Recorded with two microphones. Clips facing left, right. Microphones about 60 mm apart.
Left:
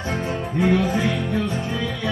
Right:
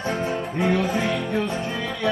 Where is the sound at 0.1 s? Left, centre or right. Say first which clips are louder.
Left 2 dB; centre.